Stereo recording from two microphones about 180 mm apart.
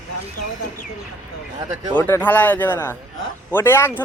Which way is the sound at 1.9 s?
10° left (ahead or behind).